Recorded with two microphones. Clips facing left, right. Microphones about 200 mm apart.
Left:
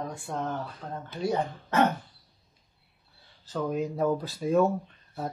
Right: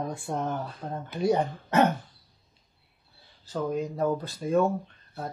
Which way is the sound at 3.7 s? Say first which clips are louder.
Left 1 dB; centre (ahead or behind).